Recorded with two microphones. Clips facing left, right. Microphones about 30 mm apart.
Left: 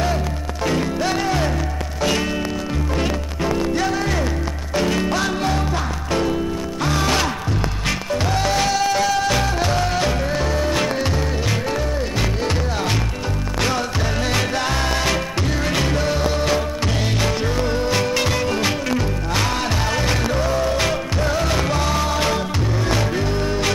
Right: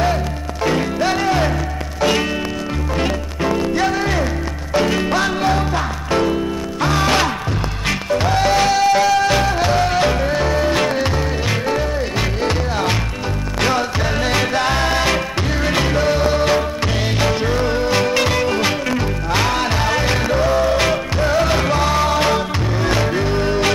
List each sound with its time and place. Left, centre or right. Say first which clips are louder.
0.7 s music: right 3 dB; centre
13.6 s music: right 4 dB; centre